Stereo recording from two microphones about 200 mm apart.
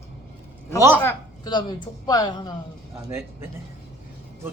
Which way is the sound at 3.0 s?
15° right (ahead or behind).